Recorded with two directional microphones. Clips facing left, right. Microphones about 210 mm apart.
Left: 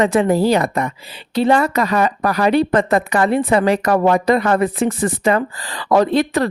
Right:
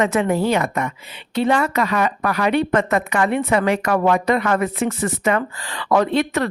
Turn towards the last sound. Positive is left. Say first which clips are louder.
# left 3 dB
turn(degrees=35)  # may be behind; listen again after turning